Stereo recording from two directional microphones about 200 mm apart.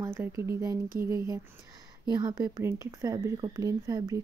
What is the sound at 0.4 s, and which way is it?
Speech, 15° right (ahead or behind).